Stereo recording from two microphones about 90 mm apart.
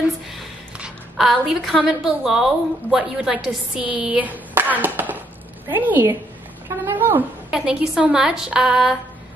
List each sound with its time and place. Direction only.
1.1 s a woman's voice: centre (ahead or behind); by 6.1 s 20° right (ahead or behind)
6.7 s a sound: 25° right (ahead or behind)
7.5 s a woman's voice: 5° right (ahead or behind)